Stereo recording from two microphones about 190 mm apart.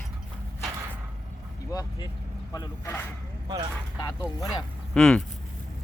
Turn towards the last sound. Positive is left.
turn(degrees=5)  # may be behind; listen again after turning